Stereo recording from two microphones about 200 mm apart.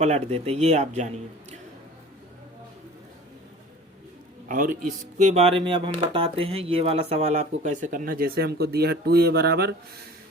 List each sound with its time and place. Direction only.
0.0 s speech: 35° right (ahead or behind)
4.4 s speech: 45° right (ahead or behind)